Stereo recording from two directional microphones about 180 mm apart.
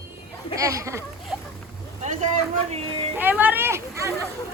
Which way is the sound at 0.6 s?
15° right (ahead or behind).